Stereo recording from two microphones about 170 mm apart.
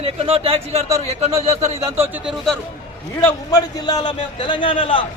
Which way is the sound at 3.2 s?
20° left (ahead or behind).